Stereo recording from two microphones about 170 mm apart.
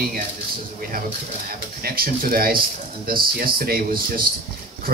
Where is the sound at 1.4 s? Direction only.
60° right (ahead or behind).